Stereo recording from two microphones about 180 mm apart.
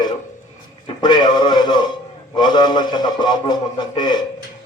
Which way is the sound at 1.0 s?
25° left (ahead or behind).